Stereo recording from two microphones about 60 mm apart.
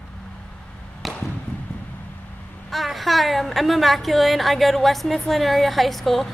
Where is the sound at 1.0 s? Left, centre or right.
Centre.